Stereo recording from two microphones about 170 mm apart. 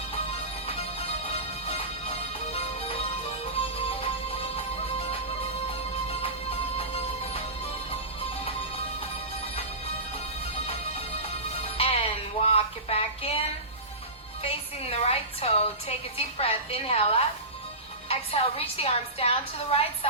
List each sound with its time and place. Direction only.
0.7 s music: 35° left (ahead or behind)
11.6 s music: 35° left (ahead or behind)
12.4 s speech: 35° left (ahead or behind)
14.4 s a woman's voice: 35° left (ahead or behind)